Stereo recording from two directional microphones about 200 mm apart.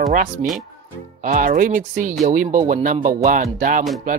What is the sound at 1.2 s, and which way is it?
Speech, 40° right (ahead or behind).